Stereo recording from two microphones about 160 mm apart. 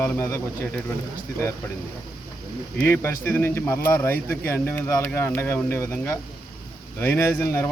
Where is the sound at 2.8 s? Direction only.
15° left (ahead or behind).